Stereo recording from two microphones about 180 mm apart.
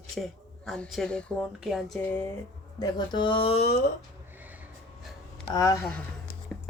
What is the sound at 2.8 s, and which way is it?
Speech, 25° left (ahead or behind).